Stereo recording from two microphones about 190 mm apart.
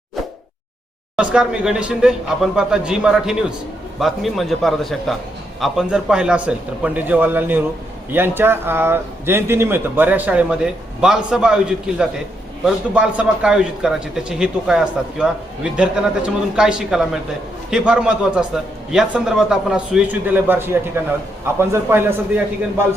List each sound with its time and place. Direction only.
1.1 s a man's voice: 5° right (ahead or behind)